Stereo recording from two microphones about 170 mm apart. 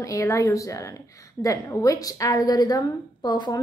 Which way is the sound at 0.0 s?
20° left (ahead or behind).